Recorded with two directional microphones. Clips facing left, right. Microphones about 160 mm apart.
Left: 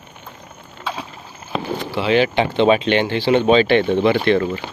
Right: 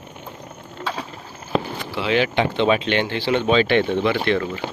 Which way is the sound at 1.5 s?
15° left (ahead or behind).